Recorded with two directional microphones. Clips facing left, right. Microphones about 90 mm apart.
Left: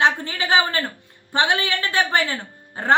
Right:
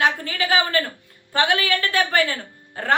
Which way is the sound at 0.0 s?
25° left (ahead or behind).